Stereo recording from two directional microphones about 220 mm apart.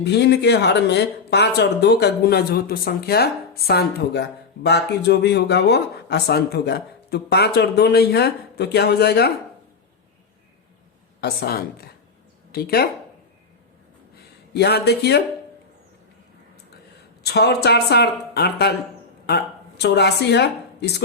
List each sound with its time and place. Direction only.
0.0 s speech: 50° left (ahead or behind)
11.2 s speech: 45° left (ahead or behind)
14.5 s speech: 50° left (ahead or behind)
17.2 s a woman's voice: 50° left (ahead or behind)